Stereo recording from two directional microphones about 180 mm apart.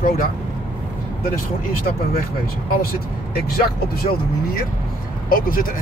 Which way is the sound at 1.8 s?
55° left (ahead or behind).